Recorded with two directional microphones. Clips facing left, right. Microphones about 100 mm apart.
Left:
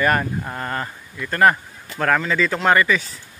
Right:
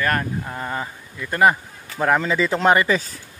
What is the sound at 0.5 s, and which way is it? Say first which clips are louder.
Speech: left 1 dB; 5° right (ahead or behind).